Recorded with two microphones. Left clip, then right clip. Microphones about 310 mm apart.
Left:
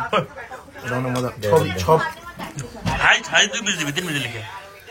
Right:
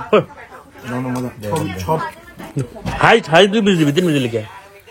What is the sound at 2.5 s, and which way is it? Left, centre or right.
A man's voice, centre.